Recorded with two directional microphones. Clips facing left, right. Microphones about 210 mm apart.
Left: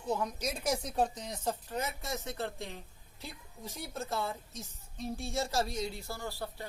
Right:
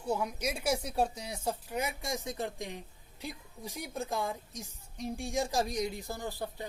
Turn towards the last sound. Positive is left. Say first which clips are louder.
# right 2 dB
turn(degrees=-20)  # may be behind; listen again after turning